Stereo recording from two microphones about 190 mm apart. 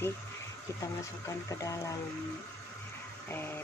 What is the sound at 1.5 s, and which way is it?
Speech, 15° left (ahead or behind).